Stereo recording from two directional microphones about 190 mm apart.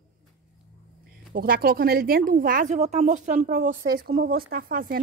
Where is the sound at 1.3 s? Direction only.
50° right (ahead or behind).